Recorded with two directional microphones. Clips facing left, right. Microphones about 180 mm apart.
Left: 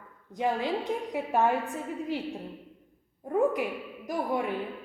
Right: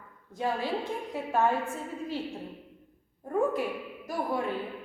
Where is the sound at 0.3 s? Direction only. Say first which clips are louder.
Left 2 dB; 20° left (ahead or behind).